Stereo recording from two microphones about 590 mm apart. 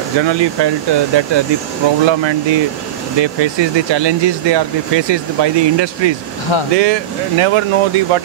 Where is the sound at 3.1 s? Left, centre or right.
Right.